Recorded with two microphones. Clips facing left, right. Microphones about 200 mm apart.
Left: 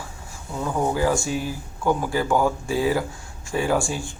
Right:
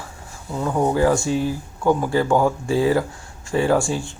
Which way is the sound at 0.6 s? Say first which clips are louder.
Right 4 dB; 15° right (ahead or behind).